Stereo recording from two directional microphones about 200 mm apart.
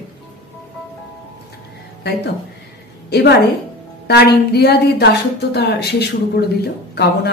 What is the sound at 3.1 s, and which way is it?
A woman's voice, 55° left (ahead or behind).